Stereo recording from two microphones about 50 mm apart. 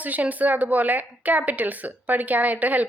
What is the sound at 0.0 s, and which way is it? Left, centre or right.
A woman's voice, right.